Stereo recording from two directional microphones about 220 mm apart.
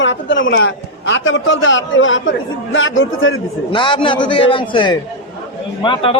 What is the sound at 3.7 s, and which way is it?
A man's voice, 20° left (ahead or behind).